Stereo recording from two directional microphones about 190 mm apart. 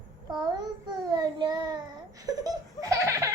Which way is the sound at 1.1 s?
20° right (ahead or behind).